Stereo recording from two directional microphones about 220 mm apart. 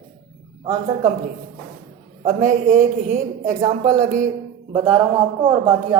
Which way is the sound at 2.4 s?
35° right (ahead or behind).